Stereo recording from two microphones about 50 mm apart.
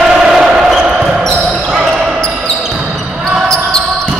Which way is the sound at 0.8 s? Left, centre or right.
Centre.